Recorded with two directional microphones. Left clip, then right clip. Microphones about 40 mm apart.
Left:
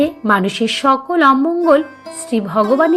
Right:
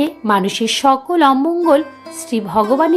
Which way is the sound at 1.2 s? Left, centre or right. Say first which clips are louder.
Left 2 dB; right.